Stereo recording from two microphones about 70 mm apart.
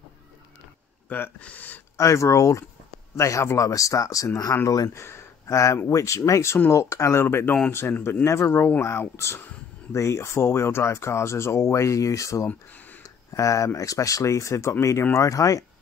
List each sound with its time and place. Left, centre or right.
1.0 s speech: left
2.0 s speech: left
4.8 s speech: left
13.0 s a sound: left
13.7 s speech: left